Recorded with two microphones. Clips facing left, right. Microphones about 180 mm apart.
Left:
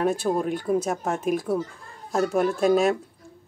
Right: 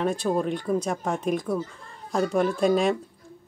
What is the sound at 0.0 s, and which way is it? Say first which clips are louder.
Speech: left 1 dB; 5° left (ahead or behind).